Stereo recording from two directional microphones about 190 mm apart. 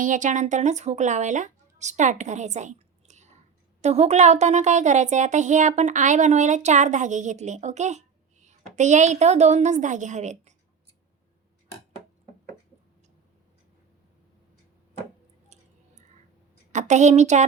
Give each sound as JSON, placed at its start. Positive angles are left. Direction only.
{"t": 0.0, "sound": "speech", "side_deg": -40}
{"t": 16.7, "sound": "speech", "side_deg": -40}